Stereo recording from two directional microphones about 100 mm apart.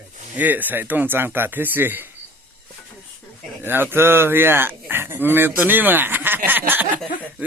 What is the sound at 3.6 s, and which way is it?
Speech, 20° right (ahead or behind).